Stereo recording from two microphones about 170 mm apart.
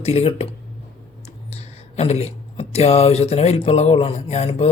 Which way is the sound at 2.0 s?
35° left (ahead or behind).